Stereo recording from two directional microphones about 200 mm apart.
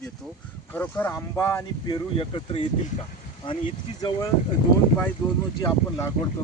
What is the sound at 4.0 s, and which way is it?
Speech, 20° left (ahead or behind).